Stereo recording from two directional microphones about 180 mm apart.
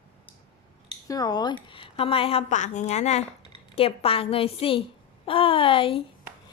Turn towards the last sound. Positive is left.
turn(degrees=30)  # may be behind; listen again after turning